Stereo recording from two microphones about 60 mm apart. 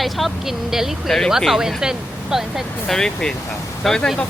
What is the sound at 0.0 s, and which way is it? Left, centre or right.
Speech, centre.